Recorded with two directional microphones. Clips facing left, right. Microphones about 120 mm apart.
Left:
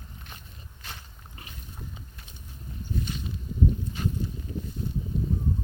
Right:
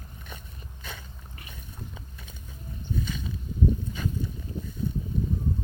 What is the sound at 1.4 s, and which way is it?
Boat, 25° left (ahead or behind).